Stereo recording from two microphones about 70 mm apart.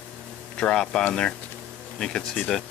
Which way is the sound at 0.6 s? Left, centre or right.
Centre.